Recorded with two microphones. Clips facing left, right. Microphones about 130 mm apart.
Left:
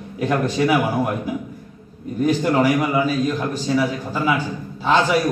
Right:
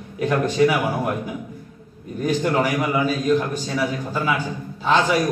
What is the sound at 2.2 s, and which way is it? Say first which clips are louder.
Speech: left 3 dB; 5° left (ahead or behind).